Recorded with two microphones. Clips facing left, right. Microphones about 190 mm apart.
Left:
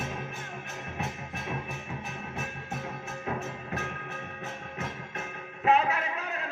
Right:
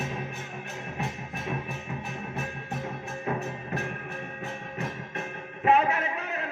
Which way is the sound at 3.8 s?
10° right (ahead or behind).